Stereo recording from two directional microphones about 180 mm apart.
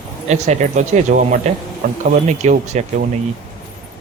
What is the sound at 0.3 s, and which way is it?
Speech, 40° right (ahead or behind).